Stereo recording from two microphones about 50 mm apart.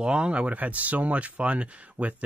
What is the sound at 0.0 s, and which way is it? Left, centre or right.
Speech, centre.